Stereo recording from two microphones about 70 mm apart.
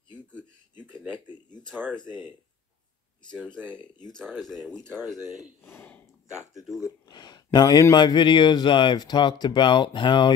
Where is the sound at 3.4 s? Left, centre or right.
Centre.